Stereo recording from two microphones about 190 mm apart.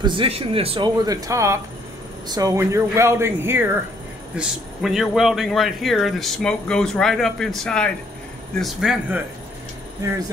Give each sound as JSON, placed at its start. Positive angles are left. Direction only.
{"t": 0.0, "sound": "speech", "side_deg": -25}
{"t": 4.4, "sound": "speech", "side_deg": 0}